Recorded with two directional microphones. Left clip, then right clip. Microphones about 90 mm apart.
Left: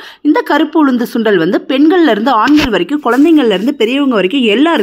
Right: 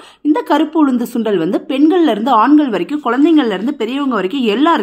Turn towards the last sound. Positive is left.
turn(degrees=30)  # may be behind; listen again after turning